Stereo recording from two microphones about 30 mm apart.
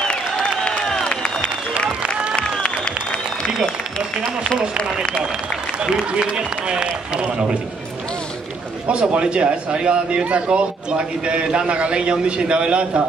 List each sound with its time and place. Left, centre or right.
0.1 s a sound: left
4.6 s a man's voice: right
9.1 s a man's voice: right